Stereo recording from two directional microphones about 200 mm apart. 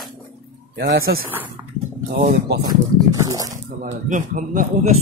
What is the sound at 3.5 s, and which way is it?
Speech, 40° right (ahead or behind).